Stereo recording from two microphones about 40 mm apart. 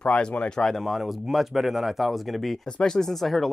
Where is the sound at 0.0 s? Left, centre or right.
Left.